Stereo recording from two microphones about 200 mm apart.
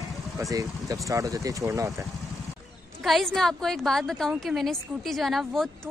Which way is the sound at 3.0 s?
Centre (ahead or behind).